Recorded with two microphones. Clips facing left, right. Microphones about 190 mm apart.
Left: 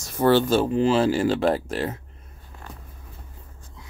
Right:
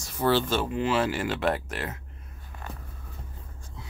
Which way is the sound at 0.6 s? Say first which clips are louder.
Left 6 dB; 30° left (ahead or behind).